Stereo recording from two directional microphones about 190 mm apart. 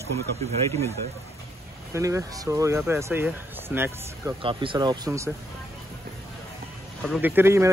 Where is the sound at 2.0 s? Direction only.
15° right (ahead or behind).